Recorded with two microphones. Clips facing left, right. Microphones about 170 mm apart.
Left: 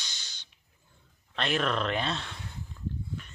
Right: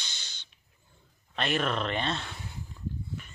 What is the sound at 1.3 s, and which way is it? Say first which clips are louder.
Speech: even; centre (ahead or behind).